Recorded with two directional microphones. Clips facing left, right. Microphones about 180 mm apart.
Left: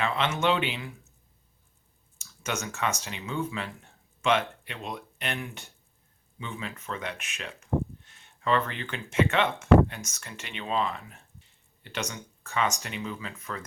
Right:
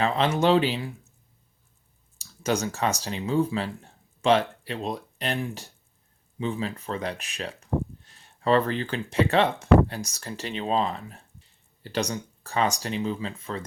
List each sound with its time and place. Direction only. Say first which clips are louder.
0.0 s speech: right 4 dB; 35° right (ahead or behind)
2.1 s speech: right 7 dB; 35° right (ahead or behind)